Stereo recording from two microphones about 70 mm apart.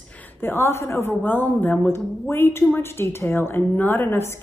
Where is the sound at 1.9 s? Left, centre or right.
Left.